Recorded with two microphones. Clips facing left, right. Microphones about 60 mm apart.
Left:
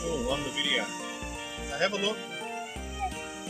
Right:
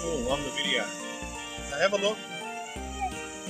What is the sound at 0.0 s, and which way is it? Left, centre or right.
Music, centre.